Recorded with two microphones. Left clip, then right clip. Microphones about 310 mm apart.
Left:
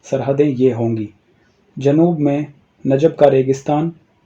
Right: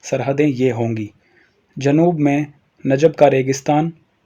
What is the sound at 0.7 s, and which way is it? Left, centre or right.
Speech, right.